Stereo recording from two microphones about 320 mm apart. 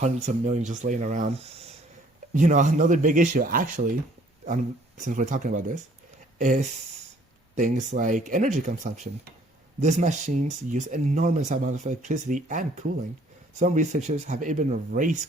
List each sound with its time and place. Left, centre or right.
0.0 s speech: right